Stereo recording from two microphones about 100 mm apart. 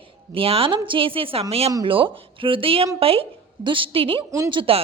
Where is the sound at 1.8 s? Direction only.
60° right (ahead or behind).